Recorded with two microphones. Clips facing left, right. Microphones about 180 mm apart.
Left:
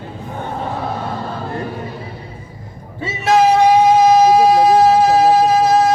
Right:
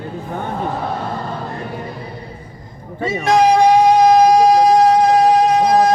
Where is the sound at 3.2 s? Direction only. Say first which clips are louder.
Even; 5° left (ahead or behind).